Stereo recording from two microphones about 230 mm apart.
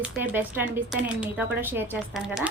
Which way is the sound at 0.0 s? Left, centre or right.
Centre.